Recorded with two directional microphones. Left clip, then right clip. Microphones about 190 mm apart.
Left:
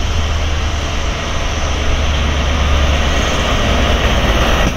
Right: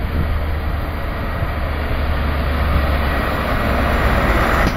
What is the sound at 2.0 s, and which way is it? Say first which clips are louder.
Vehicle: left 4 dB; 5° right (ahead or behind).